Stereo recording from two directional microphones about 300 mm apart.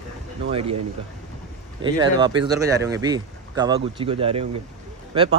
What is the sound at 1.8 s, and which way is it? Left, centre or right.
Speech, centre.